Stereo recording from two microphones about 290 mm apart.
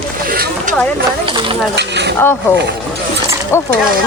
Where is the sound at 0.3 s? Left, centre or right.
Right.